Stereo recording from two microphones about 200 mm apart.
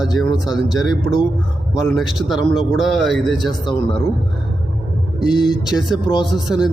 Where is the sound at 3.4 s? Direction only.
20° left (ahead or behind).